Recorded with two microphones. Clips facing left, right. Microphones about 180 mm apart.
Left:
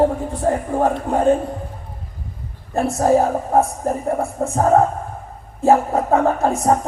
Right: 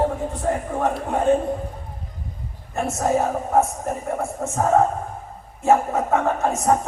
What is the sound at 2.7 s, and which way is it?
A woman's voice, 35° left (ahead or behind).